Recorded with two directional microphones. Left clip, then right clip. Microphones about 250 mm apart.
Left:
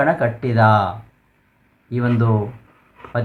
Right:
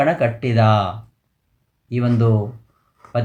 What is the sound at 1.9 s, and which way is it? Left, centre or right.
Speech, centre.